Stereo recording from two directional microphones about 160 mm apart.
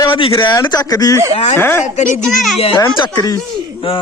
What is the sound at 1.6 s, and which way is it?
Speech, 15° left (ahead or behind).